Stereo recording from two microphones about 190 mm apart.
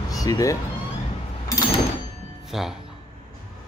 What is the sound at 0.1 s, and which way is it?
Speech, 20° left (ahead or behind).